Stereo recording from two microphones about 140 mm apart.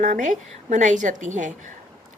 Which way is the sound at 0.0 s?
60° right (ahead or behind).